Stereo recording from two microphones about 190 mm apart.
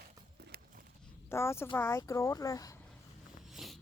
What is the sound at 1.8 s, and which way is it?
Speech, 15° left (ahead or behind).